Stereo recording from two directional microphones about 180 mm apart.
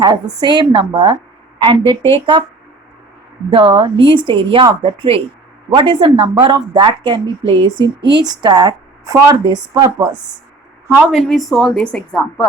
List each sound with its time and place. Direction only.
0.0 s speech: 25° right (ahead or behind)
3.5 s speech: 25° right (ahead or behind)
10.8 s a woman's voice: 5° right (ahead or behind)